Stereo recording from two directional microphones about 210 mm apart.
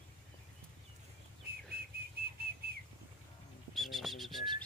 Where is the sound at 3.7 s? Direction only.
Centre (ahead or behind).